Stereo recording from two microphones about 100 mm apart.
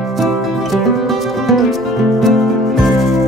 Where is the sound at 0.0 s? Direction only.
Centre (ahead or behind).